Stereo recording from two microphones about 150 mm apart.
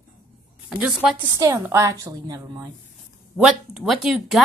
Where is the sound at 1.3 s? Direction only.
20° right (ahead or behind).